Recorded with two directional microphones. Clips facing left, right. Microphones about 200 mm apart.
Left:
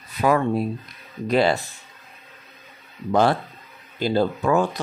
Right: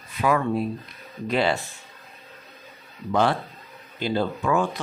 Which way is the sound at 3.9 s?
40° left (ahead or behind).